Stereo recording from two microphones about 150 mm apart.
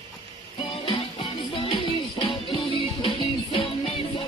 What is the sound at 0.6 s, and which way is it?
Music, 35° left (ahead or behind).